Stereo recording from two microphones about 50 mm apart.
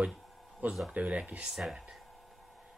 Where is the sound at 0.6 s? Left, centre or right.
Right.